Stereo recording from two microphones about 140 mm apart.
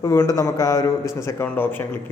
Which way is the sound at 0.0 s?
20° left (ahead or behind).